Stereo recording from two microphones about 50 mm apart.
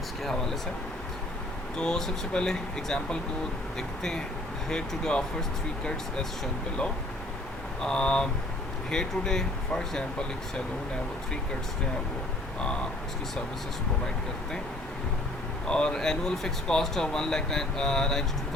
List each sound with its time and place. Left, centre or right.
1.8 s speech: centre
7.8 s speech: centre
15.6 s speech: centre